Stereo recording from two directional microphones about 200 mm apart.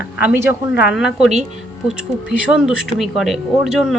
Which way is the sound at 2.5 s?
5° right (ahead or behind).